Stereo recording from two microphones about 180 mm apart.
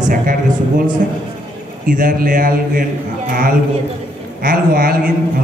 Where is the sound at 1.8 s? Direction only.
50° right (ahead or behind).